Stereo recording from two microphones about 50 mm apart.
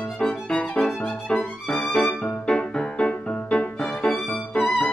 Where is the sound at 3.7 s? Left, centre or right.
Centre.